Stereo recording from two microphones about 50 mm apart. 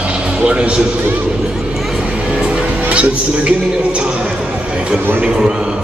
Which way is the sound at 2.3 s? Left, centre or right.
Right.